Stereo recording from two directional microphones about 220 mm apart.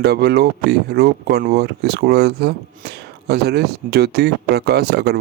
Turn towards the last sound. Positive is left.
turn(degrees=-45)  # may be behind; listen again after turning